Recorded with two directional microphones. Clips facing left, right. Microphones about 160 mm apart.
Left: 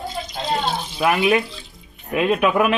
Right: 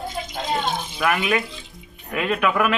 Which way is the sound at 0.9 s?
25° left (ahead or behind).